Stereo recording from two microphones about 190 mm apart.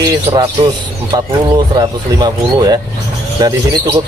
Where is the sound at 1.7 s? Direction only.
20° right (ahead or behind).